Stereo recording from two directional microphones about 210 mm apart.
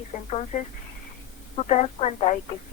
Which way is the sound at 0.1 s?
35° left (ahead or behind).